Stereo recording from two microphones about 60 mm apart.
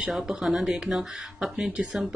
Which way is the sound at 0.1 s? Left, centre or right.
Centre.